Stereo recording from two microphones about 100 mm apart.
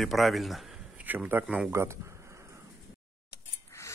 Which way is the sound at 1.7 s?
25° right (ahead or behind).